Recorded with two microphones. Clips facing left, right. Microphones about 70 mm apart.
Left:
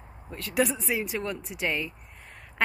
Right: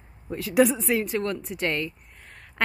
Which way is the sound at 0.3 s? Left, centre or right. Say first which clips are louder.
Right 6 dB; centre.